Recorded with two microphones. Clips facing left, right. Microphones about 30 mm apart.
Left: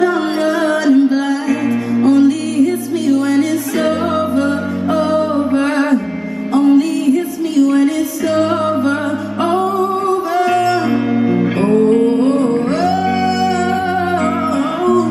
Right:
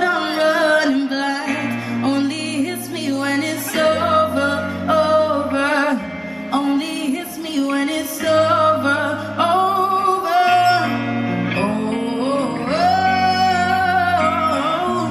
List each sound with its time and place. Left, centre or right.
0.0 s music: right
6.6 s music: centre
8.3 s music: centre; by 10.8 s right
10.9 s music: centre